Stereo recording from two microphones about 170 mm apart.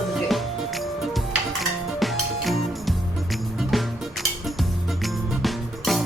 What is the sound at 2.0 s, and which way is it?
Music, centre (ahead or behind).